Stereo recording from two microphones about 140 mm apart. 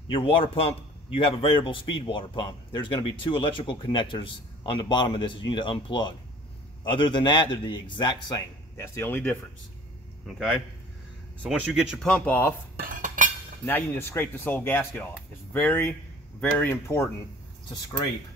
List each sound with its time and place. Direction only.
0.1 s a man's voice: 40° left (ahead or behind); by 9.4 s 15° left (ahead or behind)
11.4 s speech: 5° right (ahead or behind); by 12.5 s 15° left (ahead or behind)
12.9 s cutlery: 65° right (ahead or behind)
13.7 s speech: 15° left (ahead or behind)